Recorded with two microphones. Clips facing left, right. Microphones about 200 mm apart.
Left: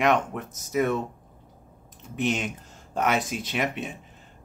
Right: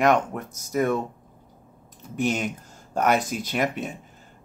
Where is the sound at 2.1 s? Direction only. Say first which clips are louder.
Right 2 dB; 45° right (ahead or behind).